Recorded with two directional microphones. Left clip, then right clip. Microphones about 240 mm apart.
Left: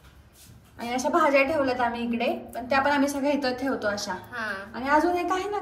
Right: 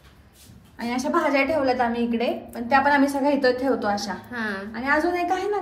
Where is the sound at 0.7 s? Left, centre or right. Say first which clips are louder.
Even; centre.